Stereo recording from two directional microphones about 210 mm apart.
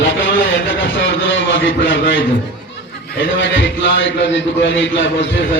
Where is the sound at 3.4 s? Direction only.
60° left (ahead or behind).